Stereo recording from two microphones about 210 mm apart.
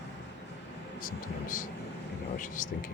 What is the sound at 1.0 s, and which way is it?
Speech, 40° left (ahead or behind).